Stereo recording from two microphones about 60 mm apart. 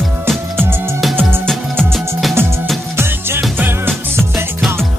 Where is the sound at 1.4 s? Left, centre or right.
Centre.